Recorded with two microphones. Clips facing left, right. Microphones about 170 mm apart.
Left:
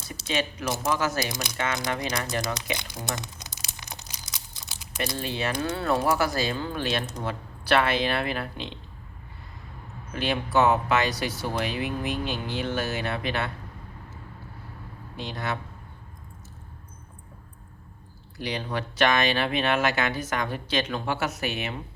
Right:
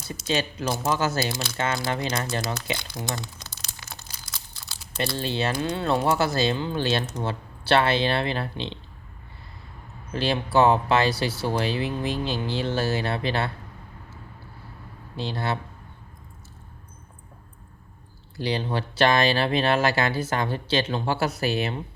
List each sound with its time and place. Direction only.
0.9 s speech: 30° right (ahead or behind)
1.2 s speech: 15° left (ahead or behind)
1.5 s speech: 30° right (ahead or behind)
2.7 s crumpling: 15° left (ahead or behind)
5.1 s speech: 30° right (ahead or behind)
10.1 s speech: 30° right (ahead or behind)
15.1 s speech: 30° right (ahead or behind)
18.3 s speech: 30° right (ahead or behind)